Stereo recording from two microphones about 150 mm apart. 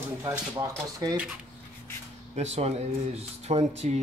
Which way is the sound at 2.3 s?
45° right (ahead or behind).